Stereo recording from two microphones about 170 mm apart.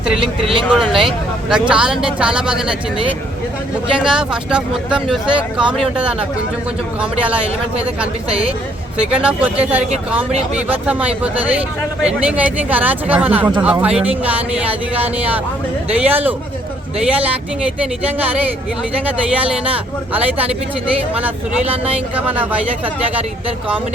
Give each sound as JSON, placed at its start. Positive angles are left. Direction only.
{"t": 0.7, "sound": "speech", "side_deg": -5}
{"t": 3.9, "sound": "speech", "side_deg": -5}
{"t": 8.3, "sound": "a woman's voice", "side_deg": -35}
{"t": 9.1, "sound": "speech", "side_deg": -10}
{"t": 19.0, "sound": "speech", "side_deg": -10}